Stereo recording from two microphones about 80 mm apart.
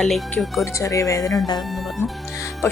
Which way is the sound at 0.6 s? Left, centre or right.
Left.